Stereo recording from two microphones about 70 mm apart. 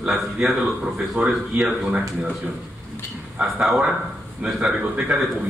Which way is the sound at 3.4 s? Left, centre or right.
Centre.